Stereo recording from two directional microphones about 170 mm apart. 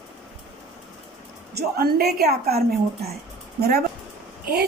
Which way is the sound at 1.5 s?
65° right (ahead or behind).